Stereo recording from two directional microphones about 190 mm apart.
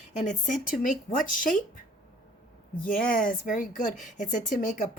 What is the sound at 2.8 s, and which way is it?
A woman's voice, 45° left (ahead or behind).